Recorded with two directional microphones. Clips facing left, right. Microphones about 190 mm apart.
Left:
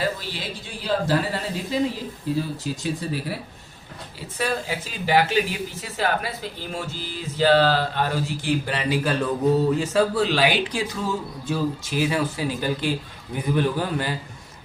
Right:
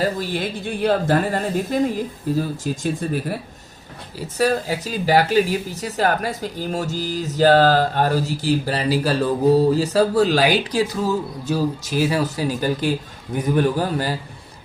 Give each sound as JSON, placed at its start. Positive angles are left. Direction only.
{"t": 0.0, "sound": "speech", "side_deg": -50}
{"t": 4.4, "sound": "speech", "side_deg": -40}